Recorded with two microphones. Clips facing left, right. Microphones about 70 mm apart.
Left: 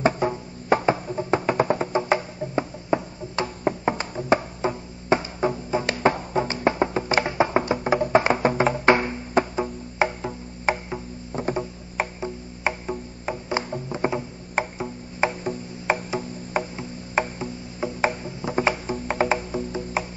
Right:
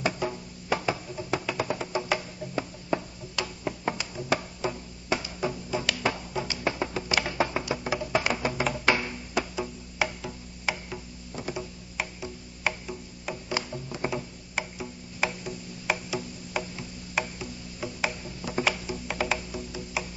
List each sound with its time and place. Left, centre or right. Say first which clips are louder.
0.0 s music: left 7 dB; left